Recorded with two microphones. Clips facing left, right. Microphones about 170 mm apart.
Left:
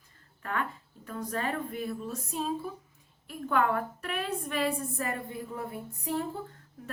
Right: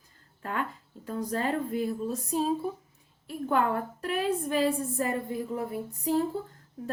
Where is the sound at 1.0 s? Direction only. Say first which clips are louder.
Right 3 dB; 30° right (ahead or behind).